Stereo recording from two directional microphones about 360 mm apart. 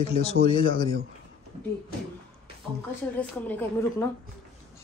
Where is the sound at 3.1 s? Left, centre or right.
Centre.